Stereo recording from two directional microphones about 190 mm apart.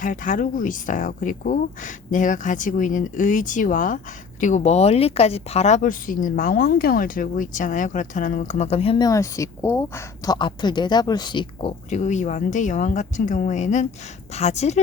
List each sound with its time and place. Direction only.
0.0 s speech: 45° left (ahead or behind)
9.0 s a woman's voice: 15° left (ahead or behind)
11.9 s a woman's voice: 40° left (ahead or behind)